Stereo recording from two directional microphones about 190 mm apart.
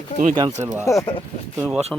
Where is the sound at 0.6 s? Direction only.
15° right (ahead or behind).